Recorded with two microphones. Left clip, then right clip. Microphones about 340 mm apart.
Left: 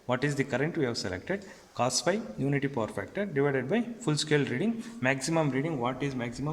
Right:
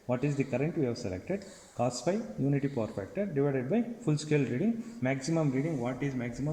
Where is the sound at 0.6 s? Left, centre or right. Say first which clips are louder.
Left 2 dB; left.